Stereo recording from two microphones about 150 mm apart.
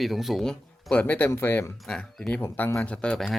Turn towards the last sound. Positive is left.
turn(degrees=5)  # may be behind; listen again after turning